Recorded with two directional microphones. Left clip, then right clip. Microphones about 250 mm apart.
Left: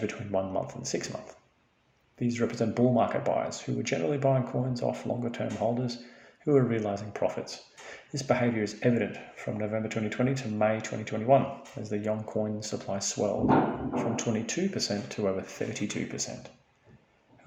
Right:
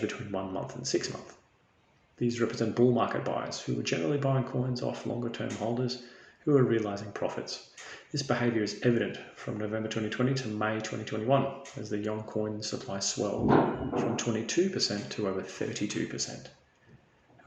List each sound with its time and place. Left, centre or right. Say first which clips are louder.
0.1 s speech: left 4 dB; left
2.1 s speech: even; left